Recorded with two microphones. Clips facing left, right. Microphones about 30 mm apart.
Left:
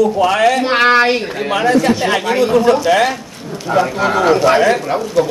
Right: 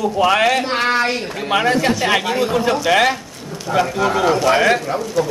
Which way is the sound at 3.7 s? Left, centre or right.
Left.